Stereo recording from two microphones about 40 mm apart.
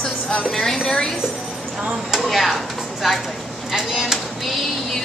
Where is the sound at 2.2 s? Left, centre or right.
Centre.